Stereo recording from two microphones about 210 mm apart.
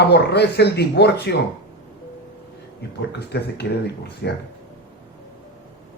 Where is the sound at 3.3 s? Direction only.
50° left (ahead or behind).